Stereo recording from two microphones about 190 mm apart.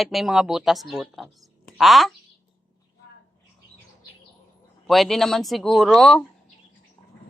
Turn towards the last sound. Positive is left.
turn(degrees=0)  # may be behind; listen again after turning